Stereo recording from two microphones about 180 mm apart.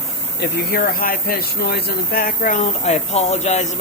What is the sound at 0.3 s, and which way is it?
Speech, 55° left (ahead or behind).